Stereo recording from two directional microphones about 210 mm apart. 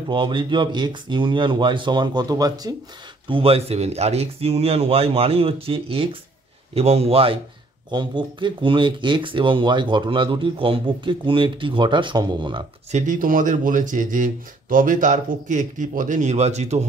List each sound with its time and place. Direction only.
0.1 s speech: 25° right (ahead or behind)
12.9 s speech: 35° right (ahead or behind)